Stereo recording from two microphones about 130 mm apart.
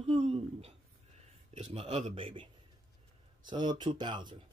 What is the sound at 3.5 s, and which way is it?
Speech, 35° right (ahead or behind).